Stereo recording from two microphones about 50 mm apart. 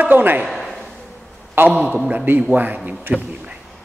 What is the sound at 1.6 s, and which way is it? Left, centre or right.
Speech, right.